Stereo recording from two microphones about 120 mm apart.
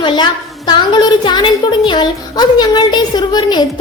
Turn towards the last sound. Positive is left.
turn(degrees=35)  # may be behind; listen again after turning